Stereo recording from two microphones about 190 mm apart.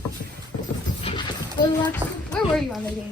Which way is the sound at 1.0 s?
25° left (ahead or behind).